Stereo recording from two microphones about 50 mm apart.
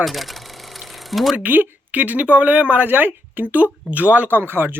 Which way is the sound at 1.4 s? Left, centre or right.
Right.